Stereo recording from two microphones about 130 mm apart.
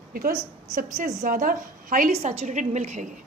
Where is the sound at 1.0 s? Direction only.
75° right (ahead or behind); by 2.1 s 90° right.